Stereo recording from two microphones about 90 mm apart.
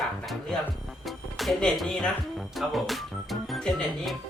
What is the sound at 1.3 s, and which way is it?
Speech, centre (ahead or behind).